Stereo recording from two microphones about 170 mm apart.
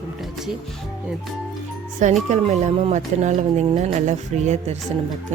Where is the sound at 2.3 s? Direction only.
40° right (ahead or behind).